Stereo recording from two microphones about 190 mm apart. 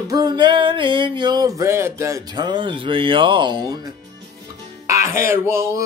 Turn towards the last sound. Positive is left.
turn(degrees=-15)  # may be behind; listen again after turning